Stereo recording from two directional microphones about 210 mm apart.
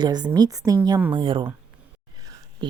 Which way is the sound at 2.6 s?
20° right (ahead or behind).